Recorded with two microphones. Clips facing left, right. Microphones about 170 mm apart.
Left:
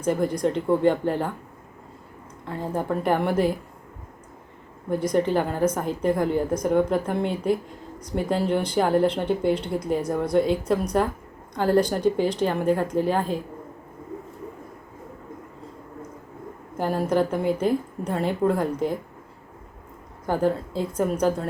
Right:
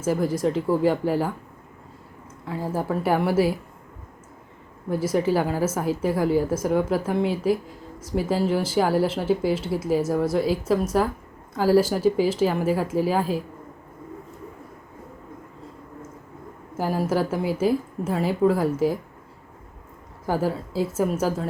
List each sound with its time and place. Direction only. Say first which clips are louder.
0.0 s a woman's voice: even; 5° right (ahead or behind)
2.4 s a woman's voice: right 1 dB; 5° right (ahead or behind)
4.9 s a woman's voice: even; 5° right (ahead or behind)
16.7 s a woman's voice: left 1 dB; 5° right (ahead or behind)
20.2 s a woman's voice: left 2 dB; 5° right (ahead or behind)